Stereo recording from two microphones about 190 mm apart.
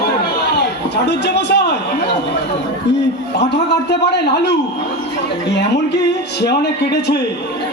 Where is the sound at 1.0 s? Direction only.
60° left (ahead or behind).